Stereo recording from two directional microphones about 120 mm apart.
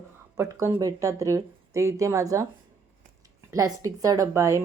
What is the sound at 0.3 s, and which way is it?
Speech, 25° right (ahead or behind).